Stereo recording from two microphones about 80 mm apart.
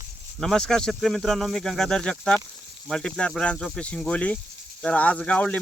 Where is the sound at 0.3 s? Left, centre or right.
Centre.